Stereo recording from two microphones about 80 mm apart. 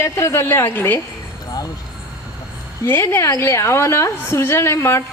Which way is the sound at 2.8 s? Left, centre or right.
Left.